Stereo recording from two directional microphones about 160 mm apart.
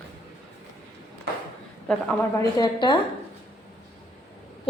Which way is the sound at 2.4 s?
25° left (ahead or behind).